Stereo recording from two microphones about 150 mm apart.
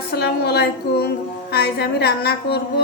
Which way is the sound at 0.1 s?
90° left.